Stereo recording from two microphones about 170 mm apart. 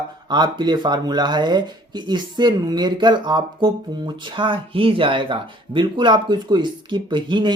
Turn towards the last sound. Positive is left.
turn(degrees=-25)  # may be behind; listen again after turning